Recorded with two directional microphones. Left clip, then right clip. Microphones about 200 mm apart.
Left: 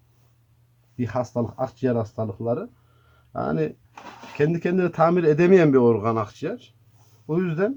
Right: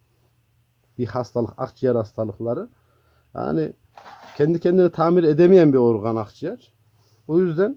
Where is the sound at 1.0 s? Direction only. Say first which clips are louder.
Right 2 dB; 35° right (ahead or behind).